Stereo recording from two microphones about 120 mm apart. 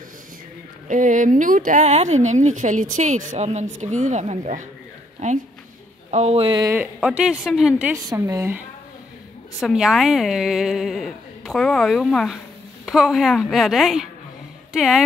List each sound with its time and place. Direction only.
0.8 s speech: 90° right; by 3.6 s 70° right (ahead or behind)
3.8 s speech: 85° right
6.0 s speech: 65° right (ahead or behind)
6.6 s speech: 20° right (ahead or behind)
7.1 s a woman's voice: 5° right (ahead or behind)
8.1 s speech: 25° right (ahead or behind)
9.6 s a woman's voice: centre (ahead or behind)